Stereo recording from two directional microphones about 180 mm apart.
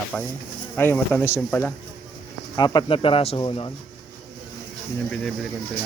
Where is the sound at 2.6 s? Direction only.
25° left (ahead or behind).